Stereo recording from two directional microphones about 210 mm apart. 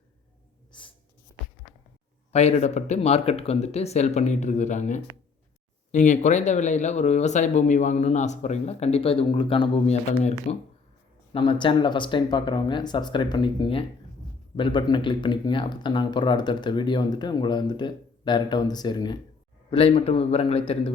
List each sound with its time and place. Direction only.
0.7 s writing: 25° left (ahead or behind)
2.3 s speech: 30° left (ahead or behind)